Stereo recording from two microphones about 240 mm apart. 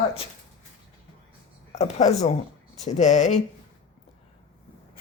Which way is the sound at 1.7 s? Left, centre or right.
Left.